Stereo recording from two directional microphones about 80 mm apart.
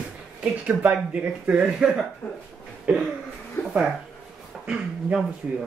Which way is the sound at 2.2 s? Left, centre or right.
Left.